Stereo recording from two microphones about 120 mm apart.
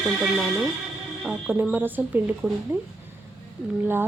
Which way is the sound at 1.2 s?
10° right (ahead or behind).